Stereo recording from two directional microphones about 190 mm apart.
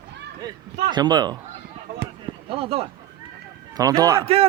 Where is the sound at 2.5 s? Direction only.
30° right (ahead or behind).